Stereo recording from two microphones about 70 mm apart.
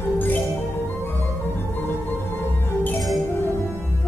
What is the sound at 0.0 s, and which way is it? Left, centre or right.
Music, left.